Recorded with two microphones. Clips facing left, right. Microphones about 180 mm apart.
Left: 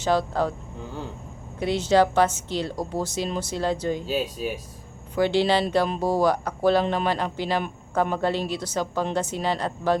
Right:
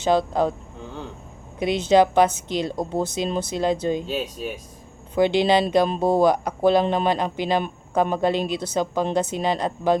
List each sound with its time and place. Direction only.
0.0 s speech: 20° right (ahead or behind)
1.5 s speech: 20° right (ahead or behind)
4.0 s speech: 5° left (ahead or behind)
5.1 s speech: 20° right (ahead or behind)